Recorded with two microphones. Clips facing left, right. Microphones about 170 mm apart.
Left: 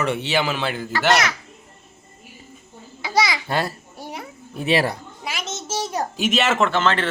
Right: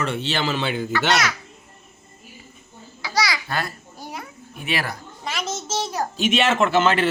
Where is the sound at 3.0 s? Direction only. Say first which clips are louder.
Left 3 dB; 25° left (ahead or behind).